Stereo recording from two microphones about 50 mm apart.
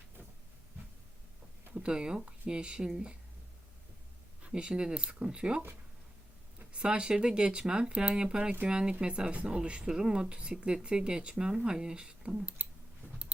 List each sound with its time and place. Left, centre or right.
1.7 s speech: centre
4.5 s speech: centre
6.7 s speech: centre